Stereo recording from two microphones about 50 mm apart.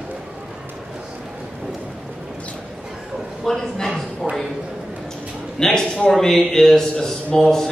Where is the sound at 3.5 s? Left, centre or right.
Centre.